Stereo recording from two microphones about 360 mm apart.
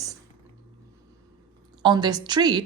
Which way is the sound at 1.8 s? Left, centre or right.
Centre.